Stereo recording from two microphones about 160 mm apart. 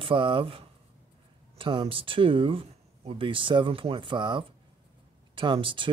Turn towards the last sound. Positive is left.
turn(degrees=-30)  # may be behind; listen again after turning